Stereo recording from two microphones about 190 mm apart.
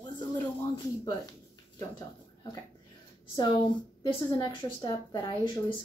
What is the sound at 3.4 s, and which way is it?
A woman's voice, 25° left (ahead or behind).